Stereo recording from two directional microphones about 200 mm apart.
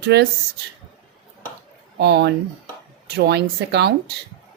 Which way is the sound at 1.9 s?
55° right (ahead or behind).